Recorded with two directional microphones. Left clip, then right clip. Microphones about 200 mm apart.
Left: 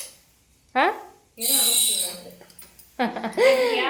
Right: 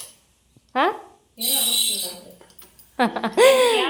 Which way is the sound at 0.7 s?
10° right (ahead or behind).